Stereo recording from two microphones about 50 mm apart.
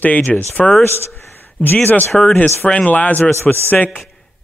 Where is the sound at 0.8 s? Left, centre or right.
Left.